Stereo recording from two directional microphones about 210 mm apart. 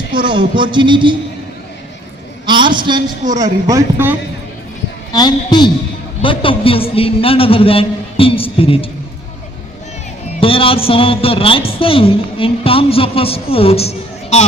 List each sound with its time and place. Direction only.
0.2 s speech: 20° right (ahead or behind)
2.5 s a sound: 20° right (ahead or behind)
3.3 s speech: 15° right (ahead or behind)
5.1 s a man's voice: 20° left (ahead or behind)
10.4 s a man's voice: 25° left (ahead or behind)